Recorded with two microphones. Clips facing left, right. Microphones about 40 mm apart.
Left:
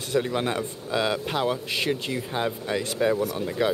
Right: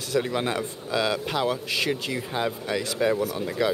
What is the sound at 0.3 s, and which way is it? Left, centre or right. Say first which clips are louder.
Speech: even; centre.